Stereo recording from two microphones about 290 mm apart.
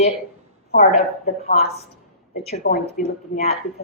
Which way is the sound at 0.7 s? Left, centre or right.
Left.